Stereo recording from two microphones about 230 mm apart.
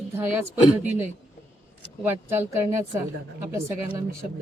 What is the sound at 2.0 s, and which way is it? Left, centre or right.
Speech, centre.